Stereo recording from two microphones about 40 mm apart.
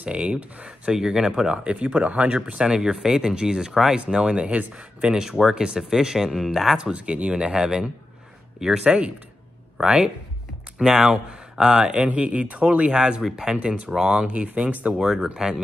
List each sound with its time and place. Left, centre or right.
0.0 s speech: right
0.7 s speech: centre
2.4 s speech: right
4.4 s speech: right; by 6.8 s centre
6.8 s speech: right
7.5 s speech: centre
8.8 s speech: right
9.8 s speech: centre
12.2 s speech: right; by 13.6 s centre
13.6 s speech: right
14.2 s speech: right
14.7 s speech: right
15.0 s speech: centre